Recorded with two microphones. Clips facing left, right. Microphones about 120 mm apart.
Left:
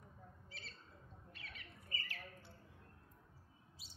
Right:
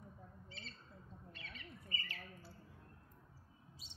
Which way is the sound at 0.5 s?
5° left (ahead or behind).